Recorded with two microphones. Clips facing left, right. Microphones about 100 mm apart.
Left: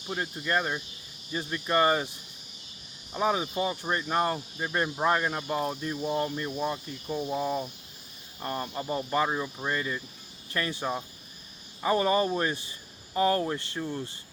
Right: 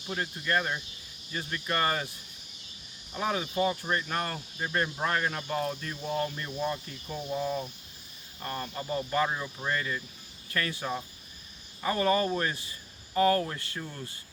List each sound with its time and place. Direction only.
0.1 s speech: 15° left (ahead or behind)
3.2 s speech: 15° left (ahead or behind)